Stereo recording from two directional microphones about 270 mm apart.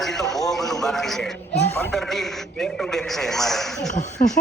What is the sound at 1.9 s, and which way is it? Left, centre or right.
A man's voice, centre.